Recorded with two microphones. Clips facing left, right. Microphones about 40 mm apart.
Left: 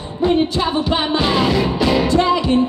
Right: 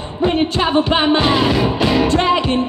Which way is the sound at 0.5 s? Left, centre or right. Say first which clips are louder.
Right 3 dB; right.